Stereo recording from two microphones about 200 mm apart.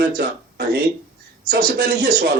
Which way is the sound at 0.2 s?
55° right (ahead or behind).